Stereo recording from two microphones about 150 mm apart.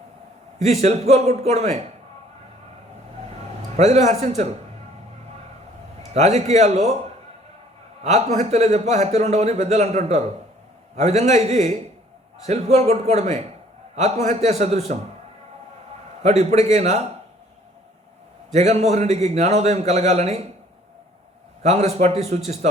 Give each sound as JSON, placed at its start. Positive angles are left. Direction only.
{"t": 0.6, "sound": "speech", "side_deg": -45}
{"t": 3.8, "sound": "speech", "side_deg": -45}
{"t": 6.1, "sound": "speech", "side_deg": -45}
{"t": 8.0, "sound": "speech", "side_deg": -45}
{"t": 16.2, "sound": "speech", "side_deg": -50}
{"t": 18.5, "sound": "speech", "side_deg": -50}
{"t": 21.6, "sound": "speech", "side_deg": -45}